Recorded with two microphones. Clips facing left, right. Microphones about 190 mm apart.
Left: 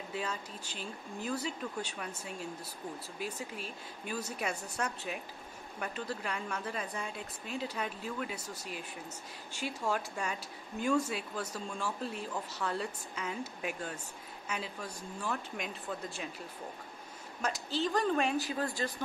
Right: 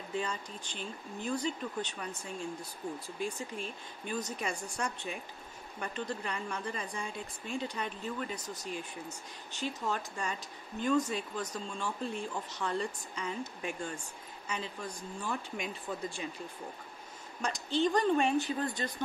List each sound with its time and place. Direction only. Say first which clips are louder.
0.1 s a woman's voice: right 3 dB; 5° left (ahead or behind)
17.4 s a woman's voice: right 3 dB; 5° left (ahead or behind)